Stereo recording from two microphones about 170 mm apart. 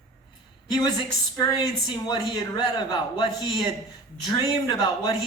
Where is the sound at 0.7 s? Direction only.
25° left (ahead or behind).